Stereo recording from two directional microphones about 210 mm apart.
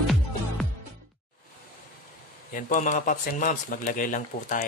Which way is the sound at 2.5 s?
40° left (ahead or behind).